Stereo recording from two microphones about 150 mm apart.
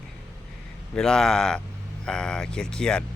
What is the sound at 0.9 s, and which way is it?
Speech, 5° left (ahead or behind).